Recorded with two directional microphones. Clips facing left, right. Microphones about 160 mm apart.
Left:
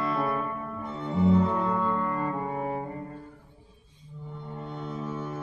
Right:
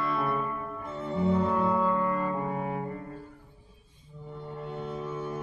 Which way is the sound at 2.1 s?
30° left (ahead or behind).